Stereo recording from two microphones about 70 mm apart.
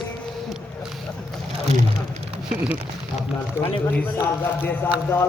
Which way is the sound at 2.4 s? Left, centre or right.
Centre.